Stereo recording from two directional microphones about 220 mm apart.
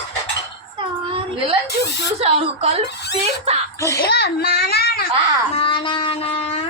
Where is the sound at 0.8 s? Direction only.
25° right (ahead or behind).